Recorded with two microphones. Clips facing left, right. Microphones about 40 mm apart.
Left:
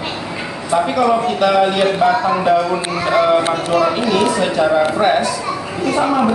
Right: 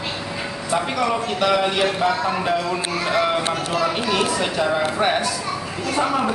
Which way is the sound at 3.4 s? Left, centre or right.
Left.